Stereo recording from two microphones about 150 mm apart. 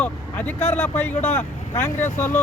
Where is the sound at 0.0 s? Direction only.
10° left (ahead or behind).